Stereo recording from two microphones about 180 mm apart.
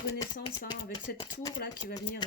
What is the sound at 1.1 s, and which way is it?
Speech, 60° left (ahead or behind).